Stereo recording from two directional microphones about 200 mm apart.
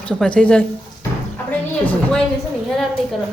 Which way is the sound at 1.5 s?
5° left (ahead or behind).